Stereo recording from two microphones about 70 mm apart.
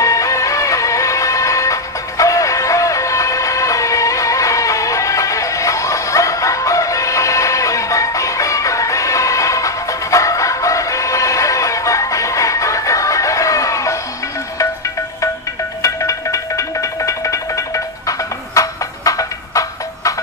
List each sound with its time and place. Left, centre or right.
0.0 s music: left
15.8 s music: left